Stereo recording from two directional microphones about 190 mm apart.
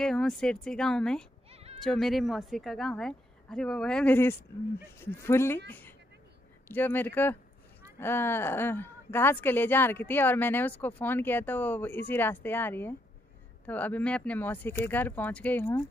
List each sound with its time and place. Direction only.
0.0 s a woman's voice: centre (ahead or behind)
1.5 s bleat: 30° right (ahead or behind)
1.8 s a woman's voice: centre (ahead or behind)